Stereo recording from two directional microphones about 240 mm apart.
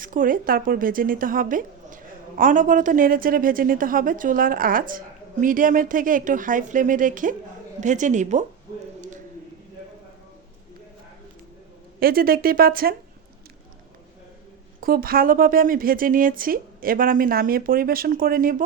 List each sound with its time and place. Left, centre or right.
0.0 s speech: right
11.9 s speech: right
14.8 s speech: right